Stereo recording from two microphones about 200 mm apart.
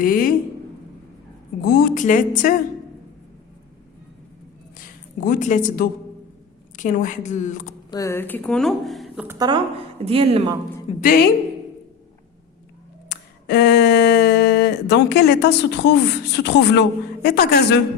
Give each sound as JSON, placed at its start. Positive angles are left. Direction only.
{"t": 0.0, "sound": "a woman's voice", "side_deg": 45}
{"t": 1.6, "sound": "speech", "side_deg": 50}
{"t": 4.8, "sound": "speech", "side_deg": 45}
{"t": 7.9, "sound": "speech", "side_deg": 15}
{"t": 9.2, "sound": "speech", "side_deg": -10}
{"t": 10.1, "sound": "speech", "side_deg": -30}
{"t": 11.0, "sound": "speech", "side_deg": 45}
{"t": 13.1, "sound": "a sound", "side_deg": 55}
{"t": 17.2, "sound": "speech", "side_deg": 50}